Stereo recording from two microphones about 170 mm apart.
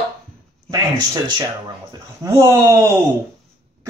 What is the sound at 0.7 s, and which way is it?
Speech, 25° right (ahead or behind).